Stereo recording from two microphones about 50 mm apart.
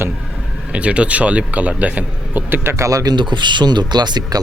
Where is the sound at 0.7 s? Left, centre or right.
Right.